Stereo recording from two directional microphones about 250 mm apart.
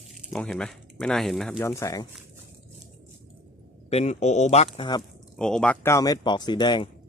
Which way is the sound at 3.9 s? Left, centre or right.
Left.